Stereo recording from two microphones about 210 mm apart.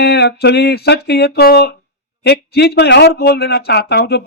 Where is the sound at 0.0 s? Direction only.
50° left (ahead or behind).